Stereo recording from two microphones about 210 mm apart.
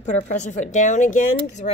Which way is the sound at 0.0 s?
35° left (ahead or behind).